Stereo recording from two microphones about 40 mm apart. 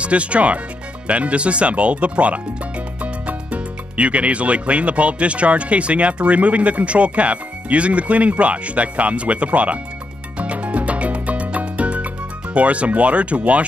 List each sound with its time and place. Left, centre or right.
0.0 s speech: right
10.4 s music: right
12.5 s speech: right